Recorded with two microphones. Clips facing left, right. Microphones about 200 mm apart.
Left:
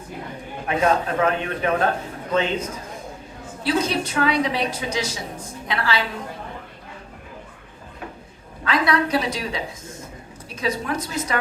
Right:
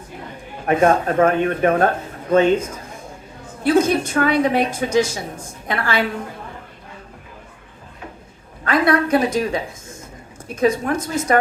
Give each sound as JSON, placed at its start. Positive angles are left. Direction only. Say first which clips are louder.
{"t": 0.7, "sound": "a woman's voice", "louder": "right 5 dB", "side_deg": -50}
{"t": 3.6, "sound": "a woman's voice", "louder": "right 6 dB", "side_deg": -50}
{"t": 8.6, "sound": "a woman's voice", "louder": "right 4 dB", "side_deg": -50}